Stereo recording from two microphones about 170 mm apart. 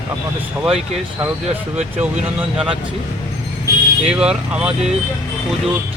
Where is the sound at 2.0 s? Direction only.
5° right (ahead or behind).